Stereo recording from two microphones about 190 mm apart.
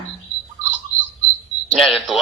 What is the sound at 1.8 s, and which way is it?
Speech, centre (ahead or behind).